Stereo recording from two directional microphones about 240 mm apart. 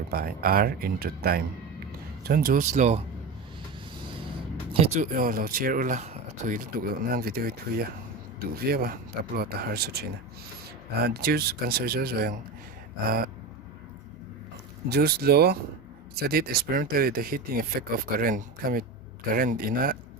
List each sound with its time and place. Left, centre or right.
0.1 s speech: right
4.7 s speech: right
14.8 s speech: right